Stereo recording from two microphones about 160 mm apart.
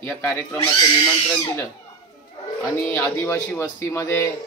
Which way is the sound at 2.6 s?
20° left (ahead or behind).